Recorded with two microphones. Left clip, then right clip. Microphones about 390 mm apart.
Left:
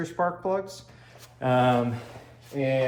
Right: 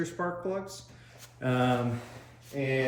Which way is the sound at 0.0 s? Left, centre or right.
Centre.